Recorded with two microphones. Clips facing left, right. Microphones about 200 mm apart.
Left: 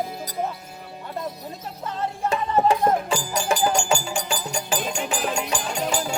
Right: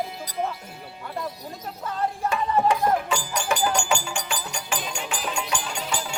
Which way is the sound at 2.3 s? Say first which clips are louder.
Left 3 dB; 30° left (ahead or behind).